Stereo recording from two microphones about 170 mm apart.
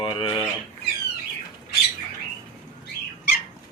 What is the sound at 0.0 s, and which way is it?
Speech, 30° left (ahead or behind).